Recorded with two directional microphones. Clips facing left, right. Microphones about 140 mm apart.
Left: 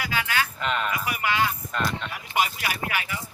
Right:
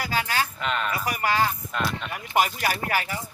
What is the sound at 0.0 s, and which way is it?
Speech, 40° right (ahead or behind).